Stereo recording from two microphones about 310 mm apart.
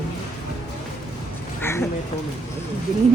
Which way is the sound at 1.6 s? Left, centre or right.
Centre.